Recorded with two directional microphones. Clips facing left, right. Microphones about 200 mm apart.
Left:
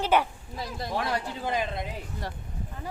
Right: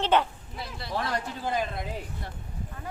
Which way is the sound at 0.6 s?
45° left (ahead or behind).